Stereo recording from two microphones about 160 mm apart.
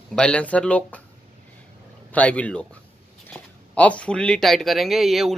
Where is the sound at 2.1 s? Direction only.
10° left (ahead or behind).